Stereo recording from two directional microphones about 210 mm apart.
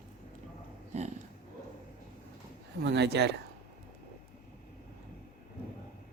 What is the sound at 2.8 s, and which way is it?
Speech, 50° right (ahead or behind).